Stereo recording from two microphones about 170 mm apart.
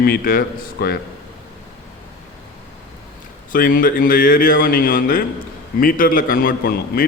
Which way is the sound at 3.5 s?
55° left (ahead or behind).